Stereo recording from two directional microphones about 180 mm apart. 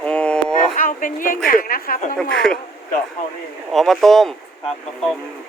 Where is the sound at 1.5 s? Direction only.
55° left (ahead or behind).